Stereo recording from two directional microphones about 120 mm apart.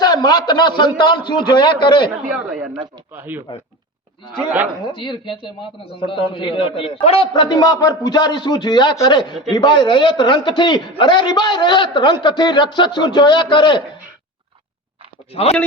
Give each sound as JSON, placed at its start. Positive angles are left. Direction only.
{"t": 0.0, "sound": "a man's voice", "side_deg": 35}
{"t": 2.3, "sound": "speech", "side_deg": -10}
{"t": 4.8, "sound": "a man's voice", "side_deg": 45}
{"t": 7.3, "sound": "a man's voice", "side_deg": 35}